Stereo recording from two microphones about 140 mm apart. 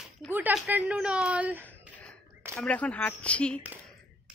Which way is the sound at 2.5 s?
5° left (ahead or behind).